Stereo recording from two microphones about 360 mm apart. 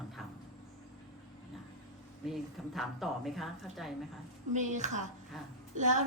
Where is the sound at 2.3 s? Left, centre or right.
Centre.